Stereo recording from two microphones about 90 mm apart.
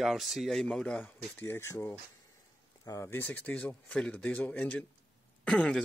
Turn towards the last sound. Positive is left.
turn(degrees=10)  # may be behind; listen again after turning